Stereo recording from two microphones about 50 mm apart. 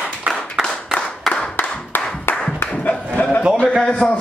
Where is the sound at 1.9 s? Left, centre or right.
Left.